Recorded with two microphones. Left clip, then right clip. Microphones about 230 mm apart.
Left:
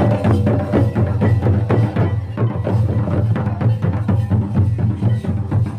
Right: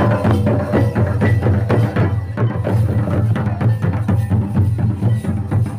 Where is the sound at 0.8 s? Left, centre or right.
Right.